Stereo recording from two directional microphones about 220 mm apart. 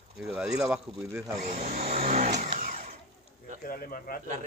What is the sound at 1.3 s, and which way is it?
Vehicle, 40° right (ahead or behind).